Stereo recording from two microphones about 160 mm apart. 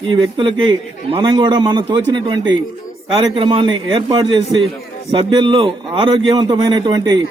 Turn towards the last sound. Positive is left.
turn(degrees=-25)  # may be behind; listen again after turning